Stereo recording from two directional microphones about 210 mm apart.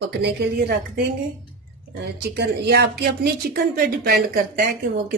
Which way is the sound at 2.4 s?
50° right (ahead or behind).